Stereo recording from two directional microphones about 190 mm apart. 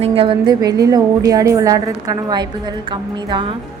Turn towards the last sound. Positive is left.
turn(degrees=-25)  # may be behind; listen again after turning